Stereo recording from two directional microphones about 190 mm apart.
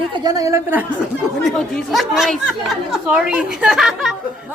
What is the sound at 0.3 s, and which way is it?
Speech, 20° right (ahead or behind).